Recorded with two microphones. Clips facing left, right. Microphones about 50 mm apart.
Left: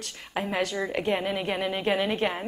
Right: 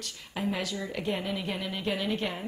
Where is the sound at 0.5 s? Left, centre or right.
Left.